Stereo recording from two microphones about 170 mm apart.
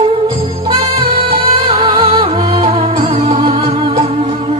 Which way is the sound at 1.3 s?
40° right (ahead or behind).